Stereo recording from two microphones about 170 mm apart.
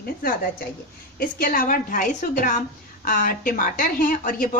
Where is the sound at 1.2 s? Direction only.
60° left (ahead or behind).